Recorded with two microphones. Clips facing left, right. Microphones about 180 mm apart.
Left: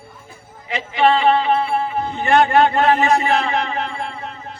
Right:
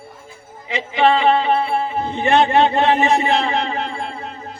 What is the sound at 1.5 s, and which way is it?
A man's voice, 20° right (ahead or behind).